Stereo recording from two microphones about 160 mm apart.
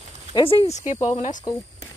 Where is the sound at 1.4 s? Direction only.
20° left (ahead or behind).